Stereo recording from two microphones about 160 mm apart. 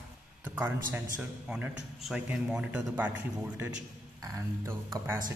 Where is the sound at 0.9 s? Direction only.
5° right (ahead or behind).